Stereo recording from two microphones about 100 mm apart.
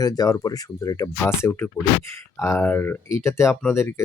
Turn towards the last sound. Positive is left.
turn(degrees=30)  # may be behind; listen again after turning